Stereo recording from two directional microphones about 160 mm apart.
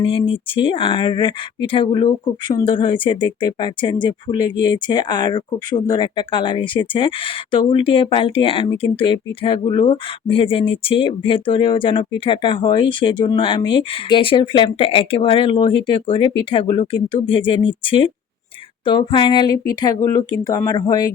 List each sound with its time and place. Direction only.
0.0 s speech: 35° left (ahead or behind)